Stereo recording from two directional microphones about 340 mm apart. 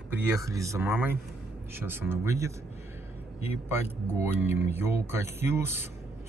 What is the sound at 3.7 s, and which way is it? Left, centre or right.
Speech, centre.